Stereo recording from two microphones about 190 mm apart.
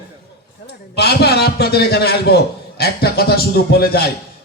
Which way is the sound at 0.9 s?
60° left (ahead or behind).